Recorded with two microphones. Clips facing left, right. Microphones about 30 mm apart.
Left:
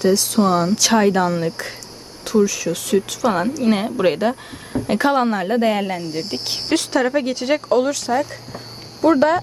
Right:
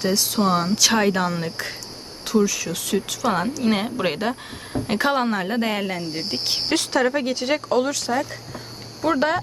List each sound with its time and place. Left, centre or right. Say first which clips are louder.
0.0 s speech: left 5 dB; centre
6.0 s speech: left 3 dB; centre
6.7 s speech: left 3 dB; centre